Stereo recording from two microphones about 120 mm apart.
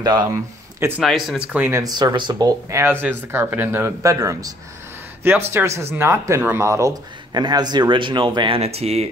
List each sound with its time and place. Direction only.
0.0 s speech: 40° right (ahead or behind)
0.3 s speech: 20° right (ahead or behind)
1.0 s speech: centre (ahead or behind)
1.5 s speech: 15° right (ahead or behind)
1.8 s speech: 35° right (ahead or behind)
2.8 s speech: 20° right (ahead or behind); by 8.5 s 40° right (ahead or behind)
8.5 s speech: 60° right (ahead or behind)